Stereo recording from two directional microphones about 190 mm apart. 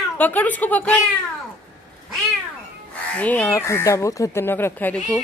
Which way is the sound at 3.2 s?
10° left (ahead or behind).